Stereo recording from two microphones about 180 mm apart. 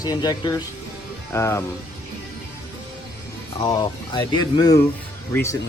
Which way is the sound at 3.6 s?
20° left (ahead or behind).